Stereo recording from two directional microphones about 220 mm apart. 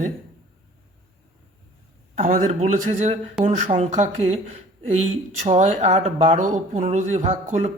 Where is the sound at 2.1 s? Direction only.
35° right (ahead or behind).